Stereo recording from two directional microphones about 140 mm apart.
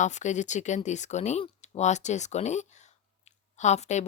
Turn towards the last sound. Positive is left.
turn(degrees=55)  # may be behind; listen again after turning